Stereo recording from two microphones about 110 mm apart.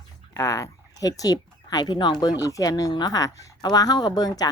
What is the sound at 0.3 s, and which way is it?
Speech, 30° left (ahead or behind).